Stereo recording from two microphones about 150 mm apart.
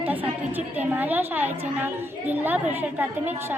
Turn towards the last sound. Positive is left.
turn(degrees=-15)  # may be behind; listen again after turning